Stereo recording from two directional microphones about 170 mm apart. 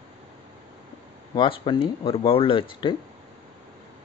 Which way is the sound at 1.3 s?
25° left (ahead or behind).